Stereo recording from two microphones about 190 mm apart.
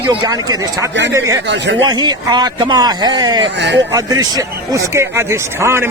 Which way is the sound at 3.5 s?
65° right (ahead or behind).